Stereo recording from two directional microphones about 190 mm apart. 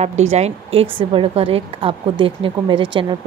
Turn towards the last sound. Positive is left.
turn(degrees=-25)  # may be behind; listen again after turning